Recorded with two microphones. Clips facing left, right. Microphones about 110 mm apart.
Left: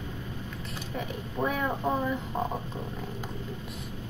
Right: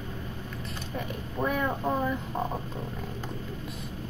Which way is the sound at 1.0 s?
Centre (ahead or behind).